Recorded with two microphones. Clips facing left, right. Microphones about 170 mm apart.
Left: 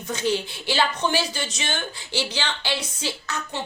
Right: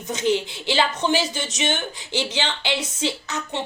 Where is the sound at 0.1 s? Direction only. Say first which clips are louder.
Right 3 dB; 20° right (ahead or behind).